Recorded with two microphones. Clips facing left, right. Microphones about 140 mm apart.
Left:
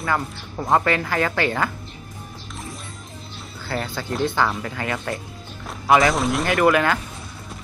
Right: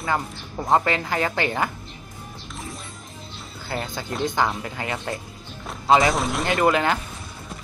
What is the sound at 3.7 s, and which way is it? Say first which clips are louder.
Speech: left 2 dB; 20° right (ahead or behind).